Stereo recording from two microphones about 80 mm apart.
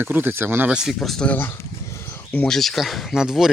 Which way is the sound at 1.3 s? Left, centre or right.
Left.